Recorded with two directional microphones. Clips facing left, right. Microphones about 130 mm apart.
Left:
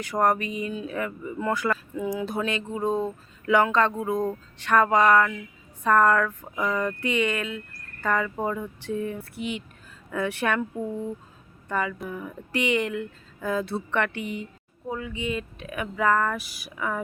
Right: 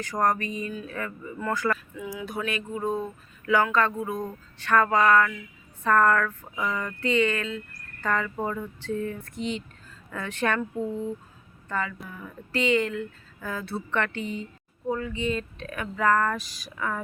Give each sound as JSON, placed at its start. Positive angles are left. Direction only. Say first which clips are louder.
{"t": 0.0, "sound": "speech", "louder": "left 2 dB", "side_deg": 10}
{"t": 2.0, "sound": "speech", "louder": "left 5 dB", "side_deg": 30}